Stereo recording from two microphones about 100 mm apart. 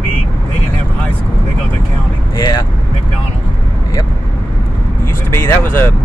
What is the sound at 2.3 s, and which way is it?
Speech, 45° left (ahead or behind).